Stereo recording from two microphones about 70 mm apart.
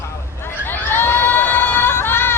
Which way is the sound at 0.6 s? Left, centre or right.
Left.